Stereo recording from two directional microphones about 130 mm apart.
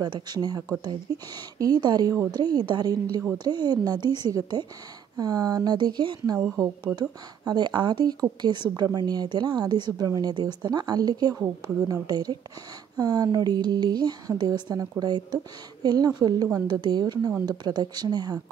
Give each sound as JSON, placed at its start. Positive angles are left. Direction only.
{"t": 0.0, "sound": "speech", "side_deg": -30}
{"t": 6.4, "sound": "speech", "side_deg": -20}
{"t": 7.0, "sound": "speech", "side_deg": -35}